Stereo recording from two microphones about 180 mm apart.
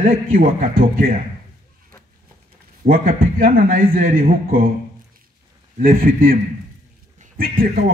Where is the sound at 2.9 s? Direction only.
50° right (ahead or behind).